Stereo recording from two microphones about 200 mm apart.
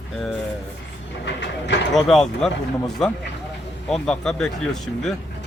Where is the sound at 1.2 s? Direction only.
60° left (ahead or behind).